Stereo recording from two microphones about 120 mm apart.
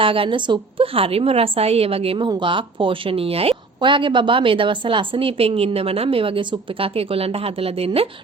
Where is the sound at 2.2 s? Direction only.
40° right (ahead or behind).